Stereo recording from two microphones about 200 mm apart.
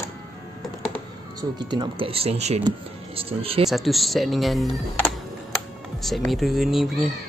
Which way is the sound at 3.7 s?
Centre (ahead or behind).